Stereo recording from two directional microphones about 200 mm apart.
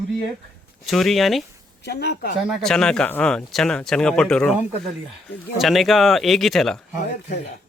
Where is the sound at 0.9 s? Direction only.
Centre (ahead or behind).